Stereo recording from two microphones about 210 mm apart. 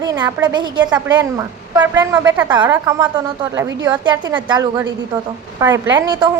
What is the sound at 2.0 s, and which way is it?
A woman's voice, 15° right (ahead or behind).